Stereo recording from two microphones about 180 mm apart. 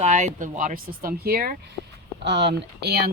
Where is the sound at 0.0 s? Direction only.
40° right (ahead or behind); by 1.5 s 60° right (ahead or behind).